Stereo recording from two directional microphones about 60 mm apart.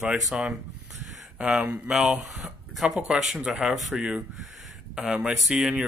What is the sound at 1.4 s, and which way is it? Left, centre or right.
Speech, centre.